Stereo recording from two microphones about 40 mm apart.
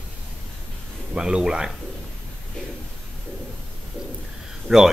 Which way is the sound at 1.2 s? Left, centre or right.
Centre.